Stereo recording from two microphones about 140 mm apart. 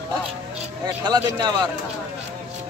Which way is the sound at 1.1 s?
30° right (ahead or behind).